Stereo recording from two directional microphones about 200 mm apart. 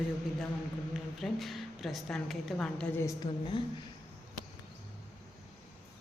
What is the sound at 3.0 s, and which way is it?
Speech, 20° left (ahead or behind).